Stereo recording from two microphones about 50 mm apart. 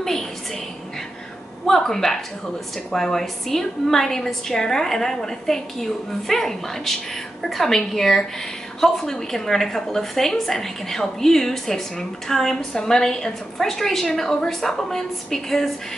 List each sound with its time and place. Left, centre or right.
1.7 s a woman's voice: centre